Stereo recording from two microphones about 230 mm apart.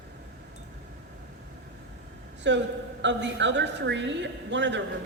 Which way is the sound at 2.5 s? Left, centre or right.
Right.